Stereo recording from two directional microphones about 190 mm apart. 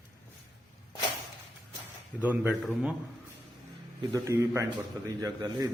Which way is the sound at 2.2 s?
10° right (ahead or behind).